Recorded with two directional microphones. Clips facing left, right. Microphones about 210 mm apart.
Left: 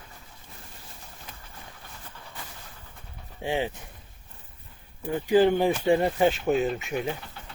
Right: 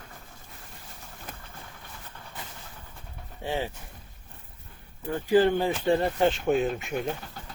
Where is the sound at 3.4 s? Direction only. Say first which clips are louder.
Left 3 dB; 15° left (ahead or behind).